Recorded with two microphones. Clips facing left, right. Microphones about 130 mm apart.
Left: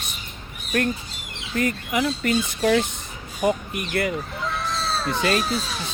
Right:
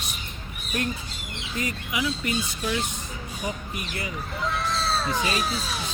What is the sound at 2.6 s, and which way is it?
Speech, 70° left (ahead or behind).